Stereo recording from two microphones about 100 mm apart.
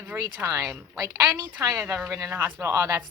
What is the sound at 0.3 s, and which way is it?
A woman's voice, 25° right (ahead or behind).